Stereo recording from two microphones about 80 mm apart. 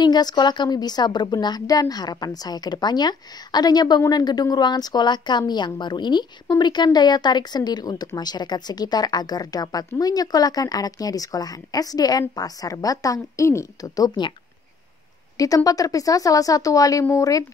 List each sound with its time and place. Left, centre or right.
0.0 s a woman's voice: left
15.3 s a woman's voice: left